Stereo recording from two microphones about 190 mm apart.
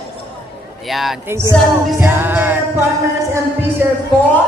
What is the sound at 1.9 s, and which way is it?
Music, 10° right (ahead or behind).